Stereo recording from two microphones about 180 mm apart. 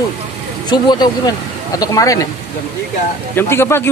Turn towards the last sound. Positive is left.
turn(degrees=15)  # may be behind; listen again after turning